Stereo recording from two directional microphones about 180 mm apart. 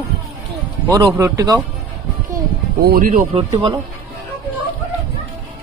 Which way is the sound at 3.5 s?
25° right (ahead or behind).